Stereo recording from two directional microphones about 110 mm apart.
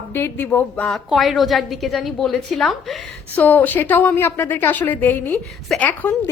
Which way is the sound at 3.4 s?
15° left (ahead or behind).